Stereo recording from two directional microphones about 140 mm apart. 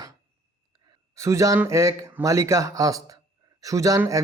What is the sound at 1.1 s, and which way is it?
Speech, 20° right (ahead or behind).